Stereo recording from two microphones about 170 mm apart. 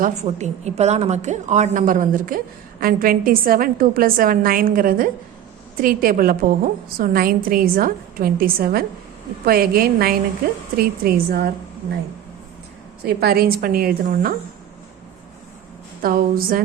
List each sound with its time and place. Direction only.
0.0 s a woman's voice: 45° right (ahead or behind); by 11.9 s 70° right (ahead or behind)
13.1 s a woman's voice: 65° right (ahead or behind)
16.0 s a woman's voice: 60° right (ahead or behind)